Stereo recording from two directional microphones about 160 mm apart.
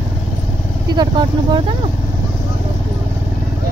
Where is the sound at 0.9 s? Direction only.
25° right (ahead or behind).